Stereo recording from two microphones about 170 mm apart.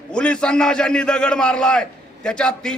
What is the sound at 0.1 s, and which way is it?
A man's voice, 5° left (ahead or behind).